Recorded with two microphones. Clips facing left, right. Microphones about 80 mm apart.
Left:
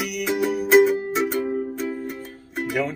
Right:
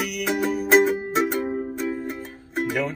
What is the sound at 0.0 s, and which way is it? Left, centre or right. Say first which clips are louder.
Music: even; centre.